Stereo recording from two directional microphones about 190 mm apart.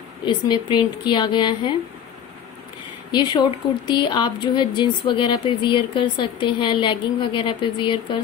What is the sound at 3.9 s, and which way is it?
Speech, 25° left (ahead or behind).